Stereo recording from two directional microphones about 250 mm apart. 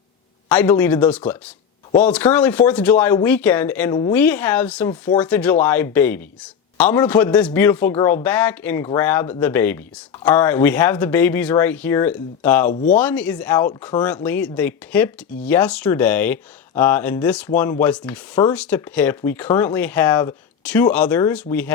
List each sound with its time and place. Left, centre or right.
0.4 s speech: centre
12.7 s speech: left
13.0 s speech: centre